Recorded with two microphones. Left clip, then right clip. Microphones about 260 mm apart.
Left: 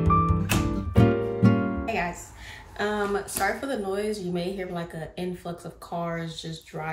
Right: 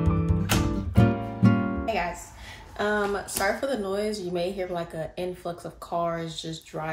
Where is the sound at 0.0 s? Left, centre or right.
Centre.